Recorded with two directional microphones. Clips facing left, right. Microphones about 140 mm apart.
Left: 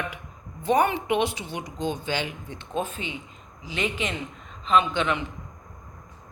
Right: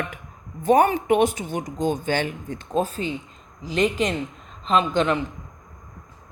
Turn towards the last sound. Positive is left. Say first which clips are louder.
# right 2 dB
turn(degrees=-35)  # may be behind; listen again after turning